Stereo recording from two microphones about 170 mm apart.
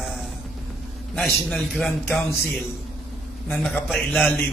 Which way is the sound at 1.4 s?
Centre (ahead or behind).